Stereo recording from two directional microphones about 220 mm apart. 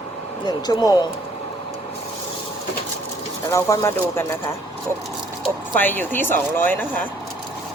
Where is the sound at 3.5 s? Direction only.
15° left (ahead or behind).